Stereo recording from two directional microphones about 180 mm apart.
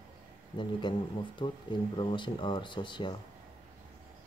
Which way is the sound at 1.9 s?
25° left (ahead or behind).